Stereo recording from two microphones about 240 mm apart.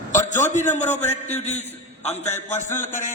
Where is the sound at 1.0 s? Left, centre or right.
Left.